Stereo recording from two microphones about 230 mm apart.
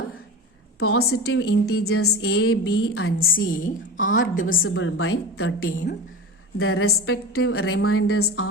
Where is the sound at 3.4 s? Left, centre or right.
Left.